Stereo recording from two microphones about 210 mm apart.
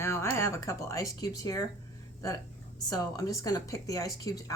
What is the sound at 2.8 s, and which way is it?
Speech, 15° left (ahead or behind).